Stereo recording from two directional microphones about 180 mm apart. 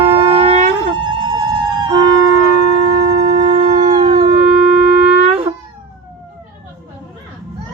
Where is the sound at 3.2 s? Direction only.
40° right (ahead or behind).